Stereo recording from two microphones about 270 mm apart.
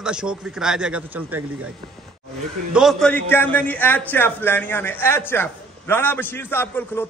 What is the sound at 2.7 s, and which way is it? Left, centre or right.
A man's voice, centre.